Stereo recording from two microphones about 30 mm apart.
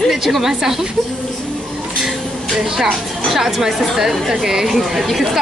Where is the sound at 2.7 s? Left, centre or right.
Centre.